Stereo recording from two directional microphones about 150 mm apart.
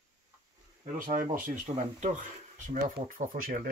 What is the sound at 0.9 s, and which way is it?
Speech, 65° right (ahead or behind).